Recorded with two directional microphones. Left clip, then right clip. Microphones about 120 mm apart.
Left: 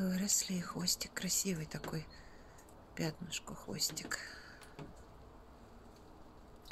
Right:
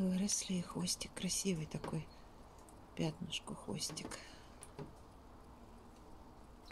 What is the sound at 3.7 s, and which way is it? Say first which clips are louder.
Speech: left 7 dB; 30° left (ahead or behind).